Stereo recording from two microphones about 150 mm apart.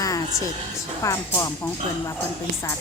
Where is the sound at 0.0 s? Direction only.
25° left (ahead or behind).